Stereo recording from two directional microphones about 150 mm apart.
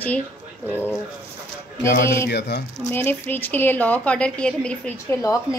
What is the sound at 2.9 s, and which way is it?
A woman's voice, 15° left (ahead or behind).